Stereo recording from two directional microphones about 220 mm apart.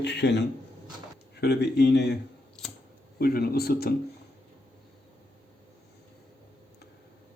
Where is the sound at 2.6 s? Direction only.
5° left (ahead or behind).